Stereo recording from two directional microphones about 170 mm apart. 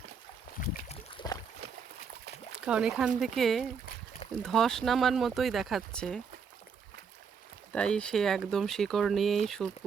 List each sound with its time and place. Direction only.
0.9 s boat: 25° left (ahead or behind)
2.6 s speech: 5° right (ahead or behind)
7.7 s speech: 5° left (ahead or behind)